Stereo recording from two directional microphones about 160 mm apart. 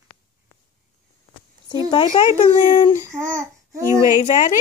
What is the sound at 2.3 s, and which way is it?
Speech, 50° left (ahead or behind).